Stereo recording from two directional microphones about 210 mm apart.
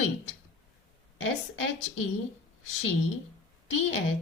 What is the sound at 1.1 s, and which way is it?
Speech, 75° left (ahead or behind).